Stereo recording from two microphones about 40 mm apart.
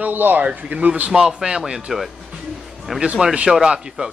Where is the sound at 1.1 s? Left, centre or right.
Centre.